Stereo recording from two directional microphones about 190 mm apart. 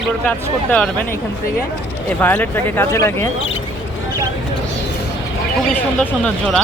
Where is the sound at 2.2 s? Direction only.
10° left (ahead or behind).